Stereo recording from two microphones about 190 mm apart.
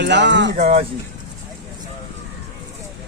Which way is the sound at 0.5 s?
35° right (ahead or behind).